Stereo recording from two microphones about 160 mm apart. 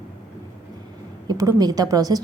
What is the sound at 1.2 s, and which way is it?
Speech, 20° right (ahead or behind).